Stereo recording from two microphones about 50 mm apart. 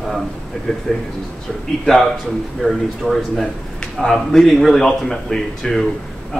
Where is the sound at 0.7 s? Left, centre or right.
Centre.